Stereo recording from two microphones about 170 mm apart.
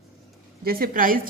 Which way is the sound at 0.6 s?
60° right (ahead or behind).